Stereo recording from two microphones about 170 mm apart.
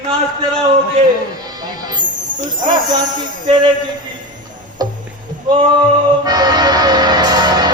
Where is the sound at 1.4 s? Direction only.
25° right (ahead or behind).